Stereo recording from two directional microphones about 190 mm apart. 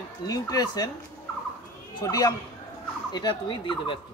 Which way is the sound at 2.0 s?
20° left (ahead or behind).